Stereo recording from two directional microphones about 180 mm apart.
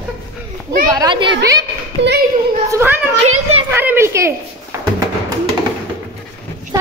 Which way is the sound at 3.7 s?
10° right (ahead or behind).